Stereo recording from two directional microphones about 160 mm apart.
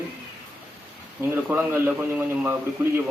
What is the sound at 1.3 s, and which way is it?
A man's voice, 10° right (ahead or behind).